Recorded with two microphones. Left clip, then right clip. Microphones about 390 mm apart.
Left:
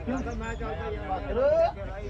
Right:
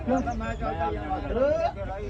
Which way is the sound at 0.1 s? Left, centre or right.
Centre.